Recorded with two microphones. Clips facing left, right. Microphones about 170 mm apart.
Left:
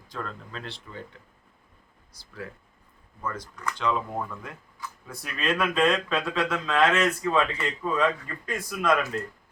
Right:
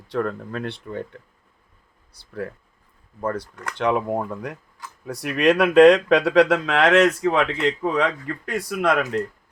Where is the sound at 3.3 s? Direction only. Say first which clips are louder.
Right 5 dB; 65° right (ahead or behind).